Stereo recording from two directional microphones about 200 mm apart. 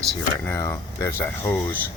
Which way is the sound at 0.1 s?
10° left (ahead or behind).